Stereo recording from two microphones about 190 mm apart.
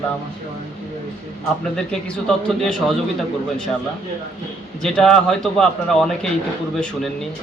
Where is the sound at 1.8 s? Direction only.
5° left (ahead or behind).